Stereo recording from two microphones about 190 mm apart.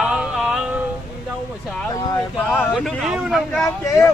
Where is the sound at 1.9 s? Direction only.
20° left (ahead or behind).